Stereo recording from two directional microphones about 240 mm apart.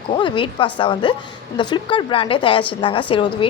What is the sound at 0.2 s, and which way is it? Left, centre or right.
A woman's voice, left.